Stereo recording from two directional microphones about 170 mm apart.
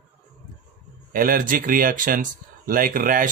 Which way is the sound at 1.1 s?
55° right (ahead or behind).